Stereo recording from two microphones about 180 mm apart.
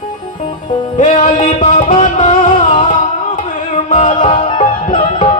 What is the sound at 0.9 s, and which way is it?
Music, 45° left (ahead or behind).